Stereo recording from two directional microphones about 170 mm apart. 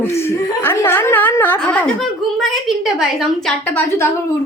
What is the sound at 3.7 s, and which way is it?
Speech, 10° left (ahead or behind).